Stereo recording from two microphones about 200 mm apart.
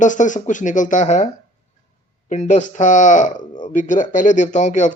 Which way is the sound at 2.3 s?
35° left (ahead or behind).